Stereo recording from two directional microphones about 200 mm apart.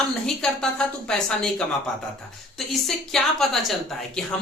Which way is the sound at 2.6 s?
Centre (ahead or behind).